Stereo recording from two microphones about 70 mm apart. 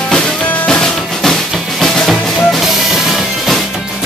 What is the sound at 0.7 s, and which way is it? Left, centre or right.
Drum, centre.